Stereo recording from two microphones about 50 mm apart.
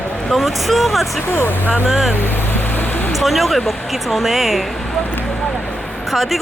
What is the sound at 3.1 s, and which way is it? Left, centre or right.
Speech, centre.